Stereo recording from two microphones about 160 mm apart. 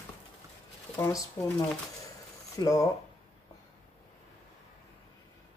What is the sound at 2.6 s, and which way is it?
Speech, 20° left (ahead or behind).